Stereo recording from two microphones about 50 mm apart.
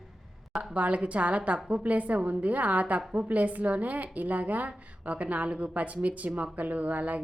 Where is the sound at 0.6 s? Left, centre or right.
Right.